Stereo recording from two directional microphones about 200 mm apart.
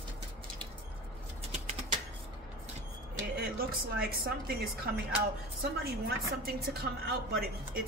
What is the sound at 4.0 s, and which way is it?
A woman's voice, 50° right (ahead or behind).